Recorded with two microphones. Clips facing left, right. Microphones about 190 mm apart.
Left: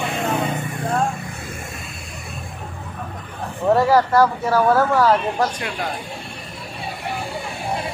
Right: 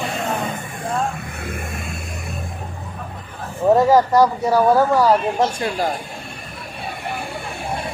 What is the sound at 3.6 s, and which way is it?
Speech, 20° right (ahead or behind).